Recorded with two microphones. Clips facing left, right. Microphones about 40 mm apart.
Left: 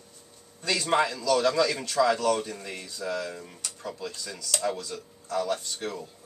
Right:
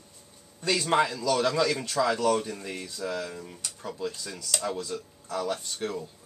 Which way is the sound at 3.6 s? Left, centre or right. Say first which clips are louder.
Right 3 dB; centre.